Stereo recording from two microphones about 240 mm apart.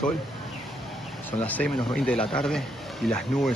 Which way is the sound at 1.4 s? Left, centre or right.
Centre.